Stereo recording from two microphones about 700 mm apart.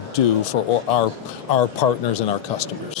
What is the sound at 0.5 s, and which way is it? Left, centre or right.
Speech, left.